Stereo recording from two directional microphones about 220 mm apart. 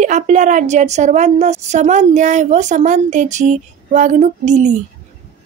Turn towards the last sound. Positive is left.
turn(degrees=-30)  # may be behind; listen again after turning